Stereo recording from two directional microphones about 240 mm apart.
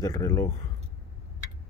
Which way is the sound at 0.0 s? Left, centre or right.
Centre.